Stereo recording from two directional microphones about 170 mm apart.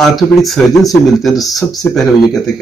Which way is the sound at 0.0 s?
Centre (ahead or behind).